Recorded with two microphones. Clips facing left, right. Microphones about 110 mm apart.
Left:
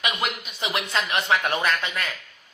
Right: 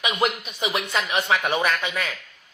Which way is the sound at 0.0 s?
20° right (ahead or behind).